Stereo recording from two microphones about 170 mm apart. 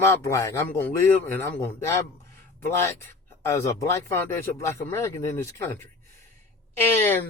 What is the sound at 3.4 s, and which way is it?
Speech, 15° left (ahead or behind).